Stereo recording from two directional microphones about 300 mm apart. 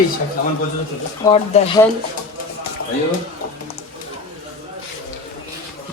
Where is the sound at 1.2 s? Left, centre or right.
Centre.